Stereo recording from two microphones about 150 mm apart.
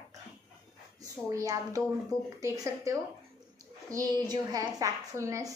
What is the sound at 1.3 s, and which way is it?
A woman's voice, 20° right (ahead or behind).